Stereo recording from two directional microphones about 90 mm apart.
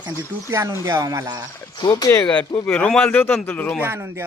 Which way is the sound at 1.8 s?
45° left (ahead or behind).